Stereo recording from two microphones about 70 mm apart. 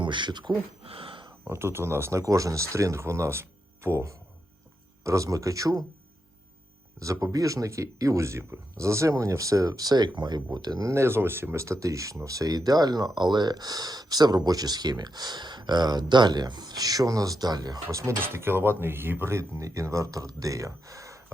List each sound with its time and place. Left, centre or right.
0.2 s speech: right
1.5 s speech: right
5.0 s speech: right
7.0 s speech: right
10.8 s speech: right
13.1 s speech: right
18.2 s speech: right